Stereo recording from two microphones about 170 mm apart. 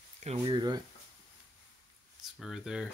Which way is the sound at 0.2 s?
35° right (ahead or behind).